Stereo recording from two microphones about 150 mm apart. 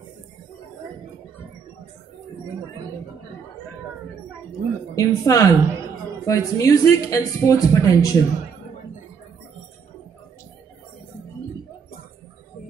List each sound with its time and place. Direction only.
4.5 s a woman's voice: 20° left (ahead or behind)